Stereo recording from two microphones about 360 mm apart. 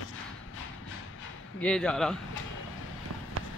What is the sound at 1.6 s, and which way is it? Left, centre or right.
Speech, centre.